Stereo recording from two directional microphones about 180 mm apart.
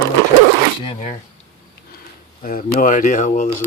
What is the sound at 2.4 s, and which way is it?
Speech, 50° left (ahead or behind).